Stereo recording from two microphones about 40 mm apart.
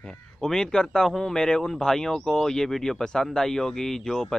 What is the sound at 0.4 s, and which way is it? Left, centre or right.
Speech, centre.